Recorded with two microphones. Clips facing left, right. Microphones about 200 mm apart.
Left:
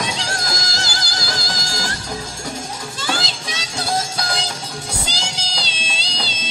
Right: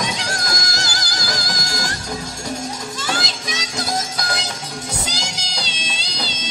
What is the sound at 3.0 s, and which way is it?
Music, 30° left (ahead or behind).